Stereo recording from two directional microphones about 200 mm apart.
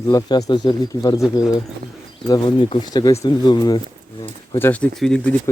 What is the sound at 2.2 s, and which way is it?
Speech, 20° left (ahead or behind).